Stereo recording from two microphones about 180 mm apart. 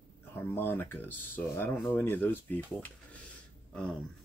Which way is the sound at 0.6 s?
10° left (ahead or behind).